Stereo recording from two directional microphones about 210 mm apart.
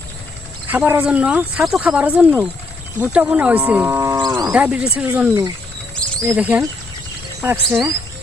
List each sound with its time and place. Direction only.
0.7 s speech: 10° right (ahead or behind)
3.0 s livestock: 5° right (ahead or behind)
4.5 s speech: 5° right (ahead or behind)